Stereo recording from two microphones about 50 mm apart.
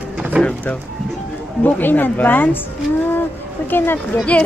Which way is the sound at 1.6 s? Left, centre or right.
Left.